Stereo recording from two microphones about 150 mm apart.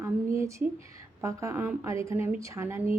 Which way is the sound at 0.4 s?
20° right (ahead or behind).